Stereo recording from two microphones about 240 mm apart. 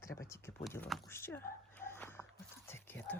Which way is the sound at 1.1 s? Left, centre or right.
Centre.